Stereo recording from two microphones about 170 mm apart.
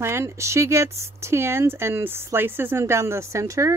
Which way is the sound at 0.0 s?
15° right (ahead or behind).